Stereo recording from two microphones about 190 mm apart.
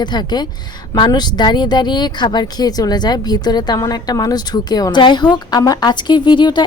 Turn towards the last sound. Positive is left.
turn(degrees=25)  # may be behind; listen again after turning